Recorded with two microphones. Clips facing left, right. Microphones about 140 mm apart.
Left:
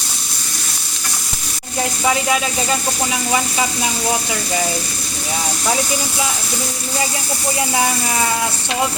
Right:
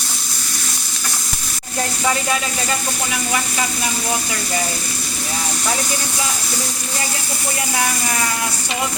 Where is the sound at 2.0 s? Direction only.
15° left (ahead or behind).